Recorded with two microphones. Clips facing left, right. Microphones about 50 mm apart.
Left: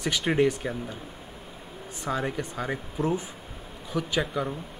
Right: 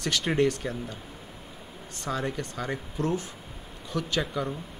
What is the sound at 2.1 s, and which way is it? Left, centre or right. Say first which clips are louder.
Speech: left 2 dB; centre.